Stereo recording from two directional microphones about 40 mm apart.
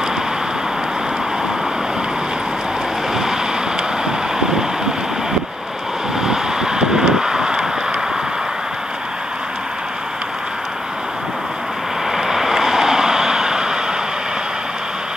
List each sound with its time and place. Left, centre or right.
4.0 s vehicle: centre
6.2 s vehicle: centre
12.1 s vehicle: centre